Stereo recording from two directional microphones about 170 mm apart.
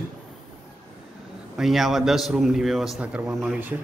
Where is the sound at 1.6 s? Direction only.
Centre (ahead or behind).